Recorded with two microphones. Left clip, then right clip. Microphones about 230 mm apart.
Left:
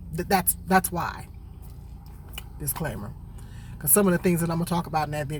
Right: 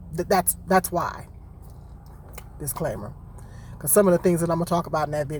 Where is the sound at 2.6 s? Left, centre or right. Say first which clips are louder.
Right 5 dB; centre.